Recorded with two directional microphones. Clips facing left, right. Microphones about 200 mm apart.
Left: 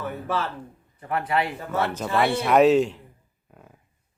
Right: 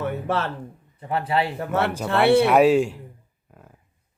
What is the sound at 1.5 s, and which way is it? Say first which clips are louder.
Speech: right 3 dB; 65° right (ahead or behind).